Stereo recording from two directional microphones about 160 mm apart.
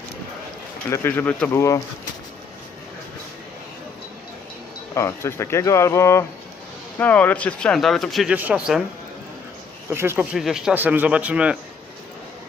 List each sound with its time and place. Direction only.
0.9 s speech: 15° left (ahead or behind)
4.9 s speech: 15° left (ahead or behind); by 8.8 s 5° right (ahead or behind)
9.9 s speech: 15° right (ahead or behind)
10.3 s speech: centre (ahead or behind)